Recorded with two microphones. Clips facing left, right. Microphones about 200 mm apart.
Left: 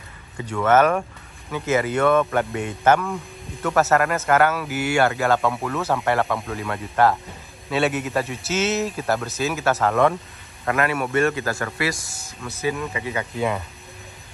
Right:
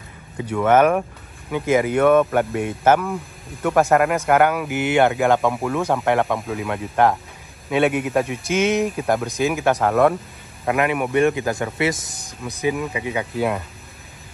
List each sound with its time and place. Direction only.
0.4 s speech: 10° right (ahead or behind)
6.4 s speech: 5° right (ahead or behind)